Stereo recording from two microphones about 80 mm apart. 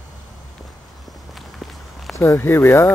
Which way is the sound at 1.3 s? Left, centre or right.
Centre.